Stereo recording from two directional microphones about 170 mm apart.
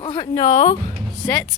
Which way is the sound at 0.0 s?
30° left (ahead or behind).